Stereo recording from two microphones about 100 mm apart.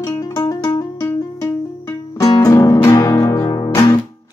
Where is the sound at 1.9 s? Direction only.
40° left (ahead or behind).